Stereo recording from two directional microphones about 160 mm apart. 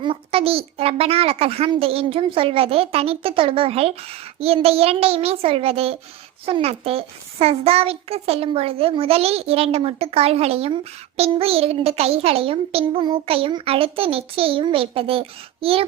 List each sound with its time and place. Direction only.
0.0 s a child's voice: 35° right (ahead or behind)